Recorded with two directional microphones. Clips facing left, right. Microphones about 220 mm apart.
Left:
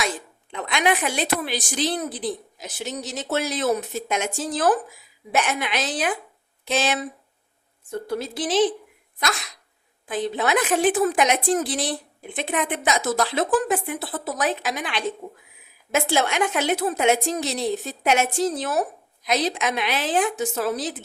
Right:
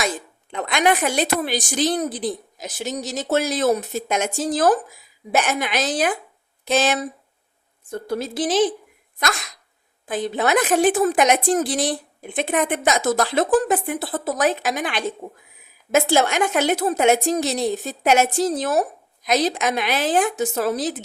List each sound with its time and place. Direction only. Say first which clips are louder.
0.5 s a woman's voice: right 3 dB; 45° right (ahead or behind)
10.1 s a woman's voice: right 2 dB; 45° right (ahead or behind)